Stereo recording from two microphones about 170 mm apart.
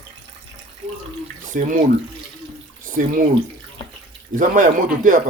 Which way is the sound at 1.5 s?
45° right (ahead or behind).